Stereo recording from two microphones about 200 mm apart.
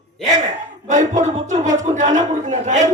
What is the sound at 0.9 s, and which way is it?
A man's voice, 35° right (ahead or behind).